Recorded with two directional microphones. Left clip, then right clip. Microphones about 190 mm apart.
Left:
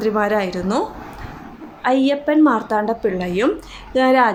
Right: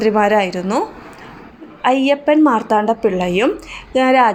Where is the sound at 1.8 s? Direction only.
15° right (ahead or behind).